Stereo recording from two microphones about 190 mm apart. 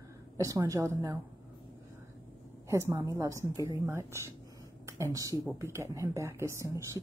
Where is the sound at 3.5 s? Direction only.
20° left (ahead or behind).